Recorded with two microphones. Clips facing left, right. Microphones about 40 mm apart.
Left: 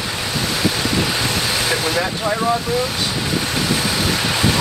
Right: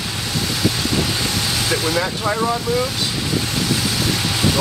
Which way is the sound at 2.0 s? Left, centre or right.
Centre.